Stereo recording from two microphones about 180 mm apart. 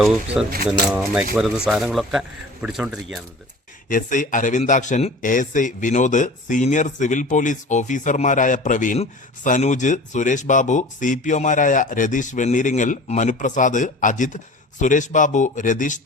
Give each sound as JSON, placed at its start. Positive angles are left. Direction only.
{"t": 0.4, "sound": "speech", "side_deg": -5}
{"t": 3.8, "sound": "speech", "side_deg": 45}